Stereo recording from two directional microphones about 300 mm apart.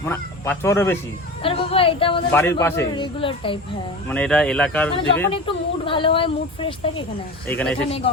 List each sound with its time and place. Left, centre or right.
0.0 s a woman's voice: centre
4.1 s speech: centre
5.3 s a woman's voice: centre
7.4 s speech: centre
7.9 s speech: centre